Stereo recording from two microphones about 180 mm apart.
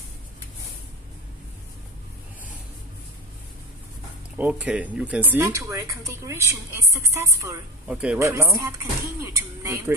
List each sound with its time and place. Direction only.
4.4 s a woman's voice: 10° right (ahead or behind)